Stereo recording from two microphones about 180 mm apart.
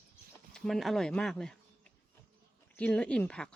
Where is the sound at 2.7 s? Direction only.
5° left (ahead or behind).